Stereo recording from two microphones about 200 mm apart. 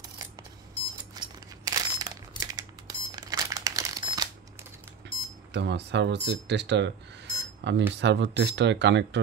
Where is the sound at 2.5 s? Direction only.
20° right (ahead or behind).